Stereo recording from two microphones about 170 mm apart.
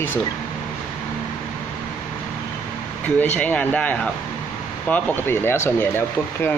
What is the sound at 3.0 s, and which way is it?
Speech, 10° left (ahead or behind).